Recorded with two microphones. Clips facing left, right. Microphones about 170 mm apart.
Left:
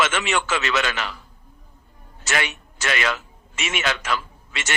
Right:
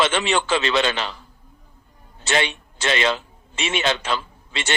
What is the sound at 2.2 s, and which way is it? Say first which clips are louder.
A man's voice: right 4 dB; 30° right (ahead or behind).